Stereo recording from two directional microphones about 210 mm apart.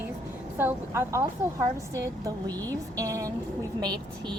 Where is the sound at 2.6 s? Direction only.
10° left (ahead or behind).